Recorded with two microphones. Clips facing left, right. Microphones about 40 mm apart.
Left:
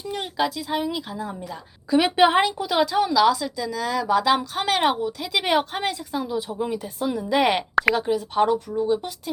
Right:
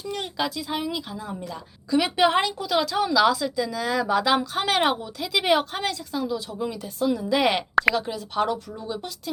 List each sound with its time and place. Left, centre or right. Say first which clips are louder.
0.0 s speech: left 3 dB; centre
1.9 s speech: left 3 dB; left
2.9 s a woman's voice: left 1 dB; centre